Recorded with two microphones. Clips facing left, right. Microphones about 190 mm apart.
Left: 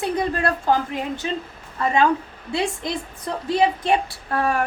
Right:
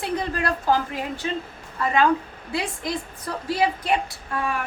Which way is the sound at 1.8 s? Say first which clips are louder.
Left 1 dB; 25° left (ahead or behind).